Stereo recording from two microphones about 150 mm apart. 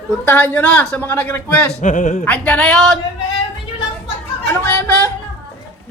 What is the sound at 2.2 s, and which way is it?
Speech, 10° left (ahead or behind).